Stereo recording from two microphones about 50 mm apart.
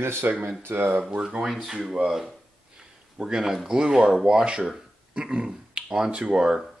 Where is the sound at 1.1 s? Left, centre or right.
Right.